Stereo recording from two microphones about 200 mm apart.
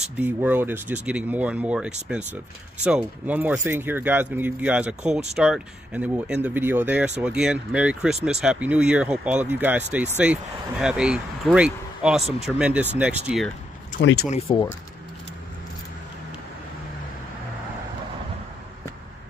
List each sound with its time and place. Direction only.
0.0 s speech: 10° right (ahead or behind)
14.0 s speech: 60° left (ahead or behind)
14.5 s speech: 25° left (ahead or behind)